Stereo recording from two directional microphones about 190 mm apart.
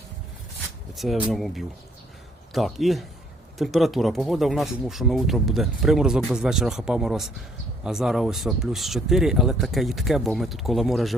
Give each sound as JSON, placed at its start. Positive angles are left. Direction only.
{"t": 0.9, "sound": "speech", "side_deg": 0}